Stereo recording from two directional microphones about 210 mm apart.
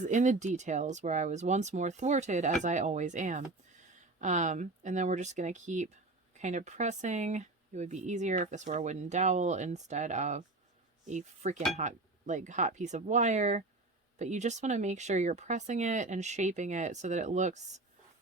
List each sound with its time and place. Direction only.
0.0 s speech: 35° right (ahead or behind)